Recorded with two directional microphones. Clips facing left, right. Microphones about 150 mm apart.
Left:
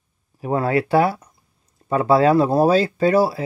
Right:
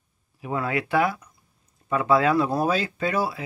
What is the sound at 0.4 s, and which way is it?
Speech, 40° left (ahead or behind).